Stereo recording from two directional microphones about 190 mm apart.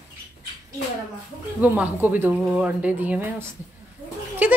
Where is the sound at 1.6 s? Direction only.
5° right (ahead or behind).